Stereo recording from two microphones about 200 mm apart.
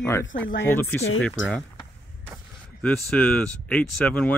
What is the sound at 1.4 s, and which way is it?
Speech, 70° left (ahead or behind).